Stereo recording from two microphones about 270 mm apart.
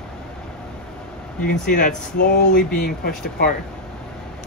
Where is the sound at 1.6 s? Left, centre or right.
Left.